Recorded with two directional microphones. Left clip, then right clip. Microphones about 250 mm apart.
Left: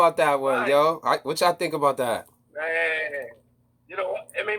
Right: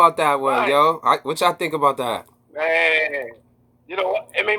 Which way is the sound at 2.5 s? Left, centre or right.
Right.